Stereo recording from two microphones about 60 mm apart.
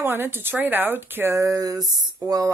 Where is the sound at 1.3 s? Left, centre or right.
Right.